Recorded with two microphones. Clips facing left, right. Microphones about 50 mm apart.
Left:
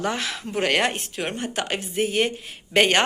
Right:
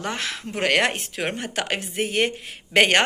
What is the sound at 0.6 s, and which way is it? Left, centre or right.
A woman's voice, right.